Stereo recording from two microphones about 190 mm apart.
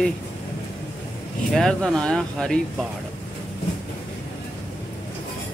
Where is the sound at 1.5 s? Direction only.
5° left (ahead or behind).